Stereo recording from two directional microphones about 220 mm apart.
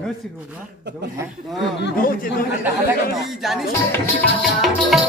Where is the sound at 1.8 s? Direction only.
50° left (ahead or behind).